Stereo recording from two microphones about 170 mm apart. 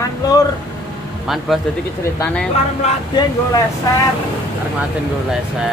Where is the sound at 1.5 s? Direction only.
Centre (ahead or behind).